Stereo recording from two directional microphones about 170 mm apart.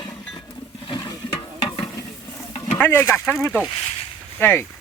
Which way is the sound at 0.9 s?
20° left (ahead or behind).